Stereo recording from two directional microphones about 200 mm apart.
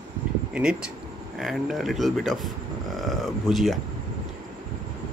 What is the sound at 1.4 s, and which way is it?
Speech, centre (ahead or behind).